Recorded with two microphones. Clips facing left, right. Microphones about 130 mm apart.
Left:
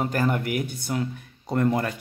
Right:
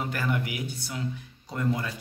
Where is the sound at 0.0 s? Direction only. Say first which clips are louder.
Left 5 dB; 45° left (ahead or behind).